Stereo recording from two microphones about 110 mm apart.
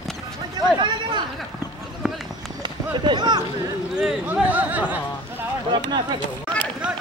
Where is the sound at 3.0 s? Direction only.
40° right (ahead or behind).